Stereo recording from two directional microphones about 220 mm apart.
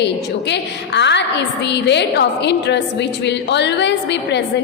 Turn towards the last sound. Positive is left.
turn(degrees=50)  # may be behind; listen again after turning